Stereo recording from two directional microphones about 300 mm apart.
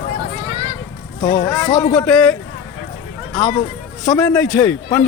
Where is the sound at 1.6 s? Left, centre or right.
Centre.